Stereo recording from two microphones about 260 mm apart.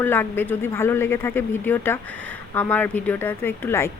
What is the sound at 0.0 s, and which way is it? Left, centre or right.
Speech, centre.